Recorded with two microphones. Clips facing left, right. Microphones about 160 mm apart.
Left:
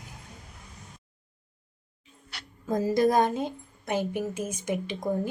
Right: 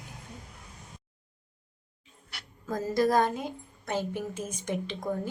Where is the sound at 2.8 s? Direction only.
20° left (ahead or behind).